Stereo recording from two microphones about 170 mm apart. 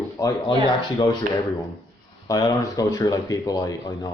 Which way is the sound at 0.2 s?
25° left (ahead or behind).